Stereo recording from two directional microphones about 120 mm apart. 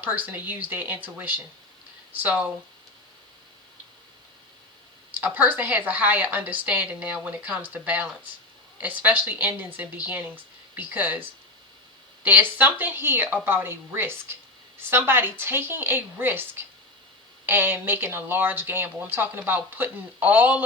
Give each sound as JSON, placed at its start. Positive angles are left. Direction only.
{"t": 0.0, "sound": "speech", "side_deg": -15}
{"t": 5.2, "sound": "speech", "side_deg": -15}
{"t": 12.2, "sound": "speech", "side_deg": -15}